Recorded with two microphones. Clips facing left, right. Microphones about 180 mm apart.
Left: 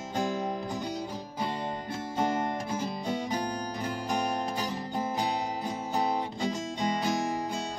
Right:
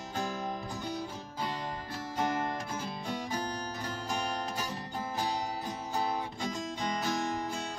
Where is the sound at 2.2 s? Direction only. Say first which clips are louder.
Left 3 dB; 25° left (ahead or behind).